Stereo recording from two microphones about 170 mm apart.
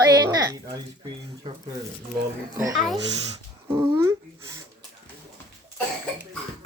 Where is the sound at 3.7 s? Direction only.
15° right (ahead or behind).